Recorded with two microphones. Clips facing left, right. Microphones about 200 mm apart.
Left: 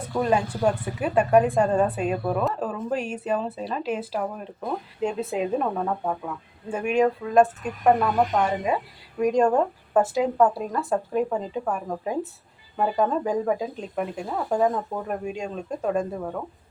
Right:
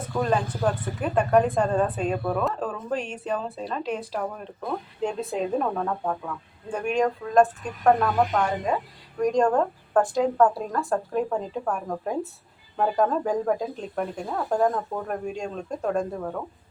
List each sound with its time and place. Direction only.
0.1 s speech: 10° left (ahead or behind)